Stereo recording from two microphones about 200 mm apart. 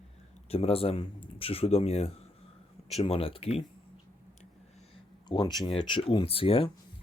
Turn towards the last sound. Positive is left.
turn(degrees=25)  # may be behind; listen again after turning